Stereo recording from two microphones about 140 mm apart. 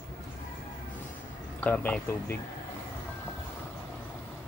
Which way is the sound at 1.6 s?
10° left (ahead or behind).